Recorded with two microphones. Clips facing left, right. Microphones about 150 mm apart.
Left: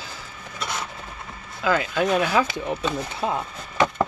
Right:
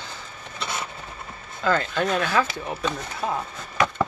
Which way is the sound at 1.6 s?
10° left (ahead or behind).